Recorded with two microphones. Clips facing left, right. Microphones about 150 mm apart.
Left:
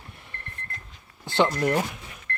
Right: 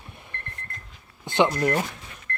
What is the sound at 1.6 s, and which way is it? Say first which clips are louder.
Speech: even; centre (ahead or behind).